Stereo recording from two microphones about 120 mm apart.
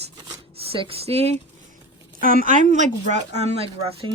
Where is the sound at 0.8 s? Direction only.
55° right (ahead or behind).